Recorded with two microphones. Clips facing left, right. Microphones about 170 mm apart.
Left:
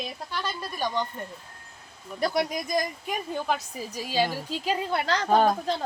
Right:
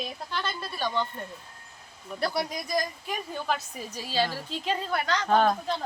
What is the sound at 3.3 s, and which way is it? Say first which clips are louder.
A woman's voice: left 2 dB; 10° left (ahead or behind).